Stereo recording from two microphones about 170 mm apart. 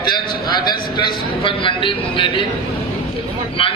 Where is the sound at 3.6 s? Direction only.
30° left (ahead or behind).